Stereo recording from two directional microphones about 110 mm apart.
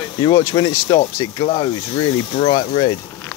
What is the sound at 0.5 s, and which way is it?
Speech, 45° left (ahead or behind).